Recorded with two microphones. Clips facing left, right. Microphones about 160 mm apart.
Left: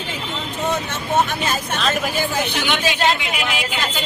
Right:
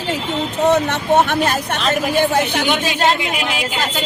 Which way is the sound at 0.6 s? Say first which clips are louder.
Right 8 dB; 70° right (ahead or behind).